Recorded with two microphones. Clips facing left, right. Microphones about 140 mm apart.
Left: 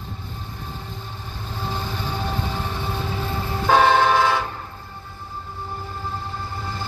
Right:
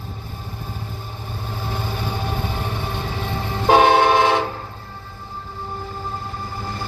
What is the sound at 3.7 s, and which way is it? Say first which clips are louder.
Train: right 3 dB; 15° right (ahead or behind).